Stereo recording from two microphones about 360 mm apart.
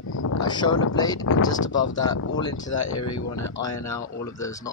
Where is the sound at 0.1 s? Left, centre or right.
Left.